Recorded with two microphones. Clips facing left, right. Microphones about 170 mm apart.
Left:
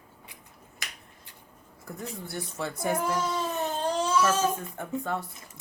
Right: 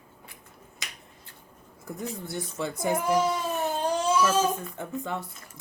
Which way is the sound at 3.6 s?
15° right (ahead or behind).